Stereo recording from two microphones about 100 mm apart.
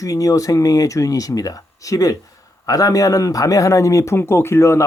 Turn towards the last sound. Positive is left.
turn(degrees=25)  # may be behind; listen again after turning